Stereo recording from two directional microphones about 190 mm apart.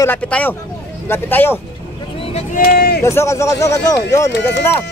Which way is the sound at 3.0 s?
15° left (ahead or behind).